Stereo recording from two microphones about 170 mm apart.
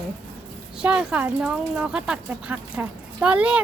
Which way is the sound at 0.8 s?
5° right (ahead or behind).